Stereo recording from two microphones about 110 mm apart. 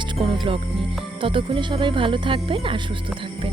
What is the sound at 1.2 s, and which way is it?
Speech, 50° right (ahead or behind).